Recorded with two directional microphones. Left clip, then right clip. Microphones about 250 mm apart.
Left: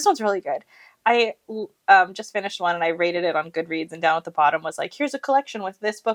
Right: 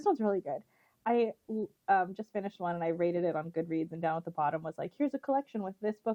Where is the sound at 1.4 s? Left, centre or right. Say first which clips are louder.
Left 7 dB; left.